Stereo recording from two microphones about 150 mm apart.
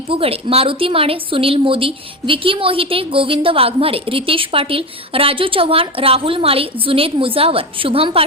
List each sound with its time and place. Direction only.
0.1 s a woman's voice: 40° right (ahead or behind)